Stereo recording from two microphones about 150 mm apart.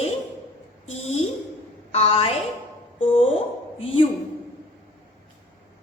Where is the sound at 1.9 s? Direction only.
40° left (ahead or behind).